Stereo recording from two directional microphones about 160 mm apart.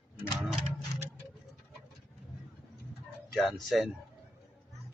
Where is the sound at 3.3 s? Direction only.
Centre (ahead or behind).